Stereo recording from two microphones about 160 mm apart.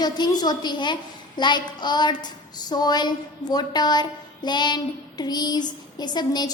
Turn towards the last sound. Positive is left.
turn(degrees=25)  # may be behind; listen again after turning